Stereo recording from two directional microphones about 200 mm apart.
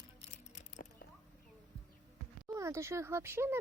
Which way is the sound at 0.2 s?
35° left (ahead or behind).